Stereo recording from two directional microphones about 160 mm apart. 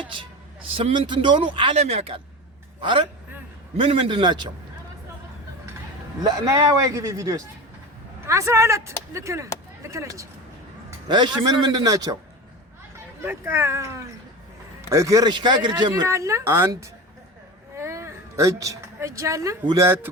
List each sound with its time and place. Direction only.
0.0 s a man's voice: 30° right (ahead or behind)
6.2 s speech: 20° right (ahead or behind)
13.2 s a woman's voice: 15° right (ahead or behind)